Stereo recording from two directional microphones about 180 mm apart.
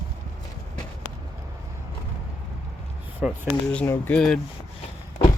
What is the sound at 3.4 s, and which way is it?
Speech, 5° left (ahead or behind).